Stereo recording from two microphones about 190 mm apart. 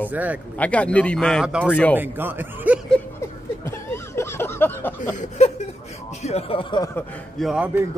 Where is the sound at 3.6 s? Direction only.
15° left (ahead or behind).